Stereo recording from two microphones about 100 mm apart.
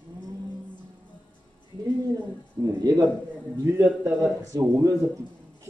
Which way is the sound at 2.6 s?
40° right (ahead or behind).